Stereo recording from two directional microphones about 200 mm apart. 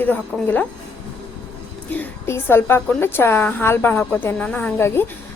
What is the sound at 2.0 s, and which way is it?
A woman's voice, 10° left (ahead or behind).